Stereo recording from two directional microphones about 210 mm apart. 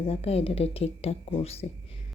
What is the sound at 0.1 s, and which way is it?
A woman's voice, 30° left (ahead or behind).